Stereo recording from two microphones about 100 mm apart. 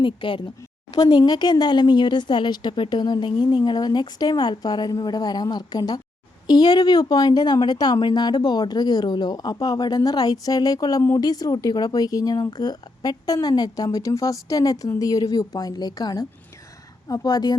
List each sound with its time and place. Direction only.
0.0 s speech: 55° left (ahead or behind)
0.9 s speech: 40° left (ahead or behind)